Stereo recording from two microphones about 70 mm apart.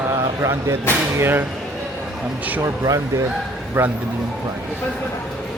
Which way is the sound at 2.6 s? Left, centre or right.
Right.